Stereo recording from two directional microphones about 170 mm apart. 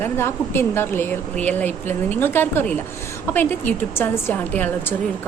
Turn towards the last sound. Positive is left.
turn(degrees=10)  # may be behind; listen again after turning